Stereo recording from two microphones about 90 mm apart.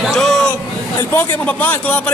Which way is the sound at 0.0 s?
Centre (ahead or behind).